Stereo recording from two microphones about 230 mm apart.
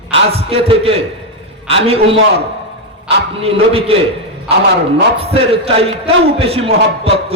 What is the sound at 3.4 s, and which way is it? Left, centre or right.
Speech, right.